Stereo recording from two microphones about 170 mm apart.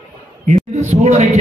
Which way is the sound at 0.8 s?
40° right (ahead or behind).